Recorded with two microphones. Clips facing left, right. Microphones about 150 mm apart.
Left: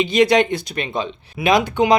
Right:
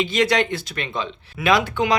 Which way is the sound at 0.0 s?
15° left (ahead or behind).